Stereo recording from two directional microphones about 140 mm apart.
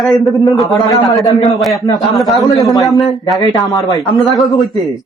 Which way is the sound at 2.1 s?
Centre (ahead or behind).